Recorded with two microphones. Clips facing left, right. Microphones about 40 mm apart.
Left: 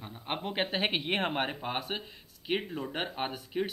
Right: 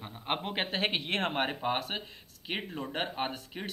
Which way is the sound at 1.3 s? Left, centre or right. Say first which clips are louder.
Right 2 dB; centre.